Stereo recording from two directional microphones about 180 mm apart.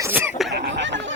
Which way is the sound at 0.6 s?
80° right.